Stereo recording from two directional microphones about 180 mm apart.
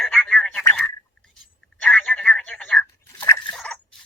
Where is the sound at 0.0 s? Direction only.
5° left (ahead or behind).